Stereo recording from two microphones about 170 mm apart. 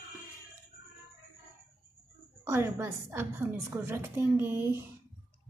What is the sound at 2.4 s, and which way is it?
A woman's voice, 15° right (ahead or behind).